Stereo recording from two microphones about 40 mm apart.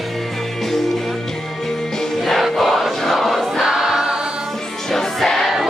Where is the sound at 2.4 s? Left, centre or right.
Centre.